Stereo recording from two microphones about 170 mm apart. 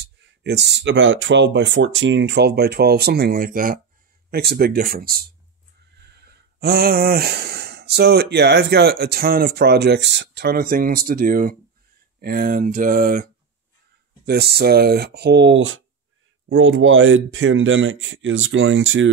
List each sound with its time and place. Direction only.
0.0 s speech: 85° right; by 3.8 s 55° right (ahead or behind)
4.3 s speech: 70° right (ahead or behind)
6.1 s speech: 70° right (ahead or behind); by 13.3 s 55° right (ahead or behind)
14.2 s speech: 70° right (ahead or behind)
17.3 s speech: 90° right